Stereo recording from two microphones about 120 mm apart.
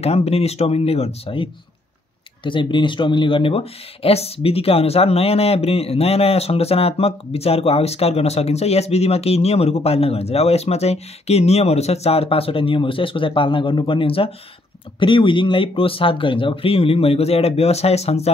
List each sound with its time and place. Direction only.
0.0 s speech: 60° left (ahead or behind)
2.4 s speech: 45° left (ahead or behind); by 18.3 s 60° left (ahead or behind)